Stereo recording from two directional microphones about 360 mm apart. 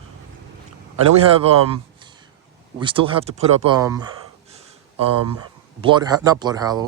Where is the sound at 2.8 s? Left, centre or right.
Centre.